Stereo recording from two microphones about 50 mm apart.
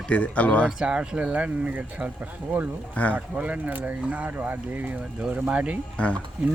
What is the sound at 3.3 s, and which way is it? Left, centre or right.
Speech, right.